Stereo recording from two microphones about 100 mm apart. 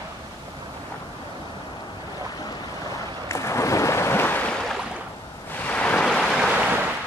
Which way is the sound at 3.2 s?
30° left (ahead or behind).